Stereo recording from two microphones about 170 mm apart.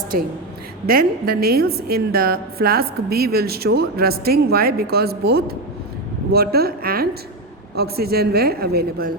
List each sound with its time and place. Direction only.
0.9 s a woman's voice: 60° right (ahead or behind)